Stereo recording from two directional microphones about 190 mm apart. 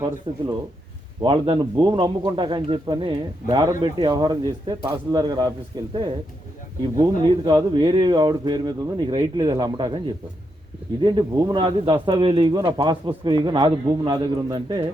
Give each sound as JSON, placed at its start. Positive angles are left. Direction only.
{"t": 0.3, "sound": "speech", "side_deg": -25}
{"t": 11.0, "sound": "speech", "side_deg": -25}